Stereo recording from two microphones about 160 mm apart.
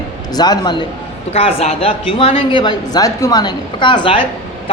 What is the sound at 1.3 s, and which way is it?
A woman's voice, 40° left (ahead or behind).